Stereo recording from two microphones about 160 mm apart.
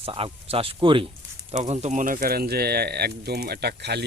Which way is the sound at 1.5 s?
45° right (ahead or behind).